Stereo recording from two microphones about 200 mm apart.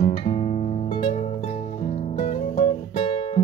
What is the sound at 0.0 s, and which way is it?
Music, 30° left (ahead or behind).